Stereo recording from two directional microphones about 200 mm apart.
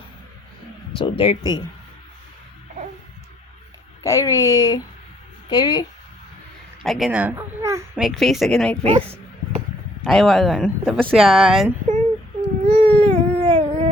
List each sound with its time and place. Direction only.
0.9 s speech: 25° left (ahead or behind)
4.0 s speech: 15° left (ahead or behind)
6.8 s speech: centre (ahead or behind)
8.0 s speech: centre (ahead or behind)
8.8 s speech: 30° right (ahead or behind)
10.0 s speech: centre (ahead or behind)
12.6 s a sound: 30° right (ahead or behind)